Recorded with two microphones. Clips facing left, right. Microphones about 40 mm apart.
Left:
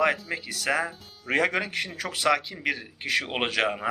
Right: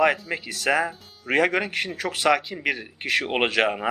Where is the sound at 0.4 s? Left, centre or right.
Right.